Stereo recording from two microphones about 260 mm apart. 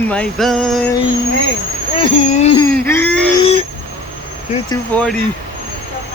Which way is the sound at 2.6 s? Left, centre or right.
Centre.